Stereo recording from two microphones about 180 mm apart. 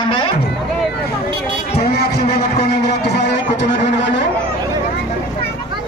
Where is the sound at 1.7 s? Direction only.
65° left (ahead or behind).